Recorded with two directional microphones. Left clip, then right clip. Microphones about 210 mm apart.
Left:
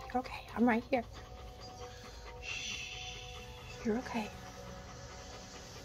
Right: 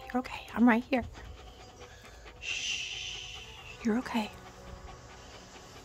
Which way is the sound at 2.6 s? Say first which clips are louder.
Right 8 dB; 40° right (ahead or behind).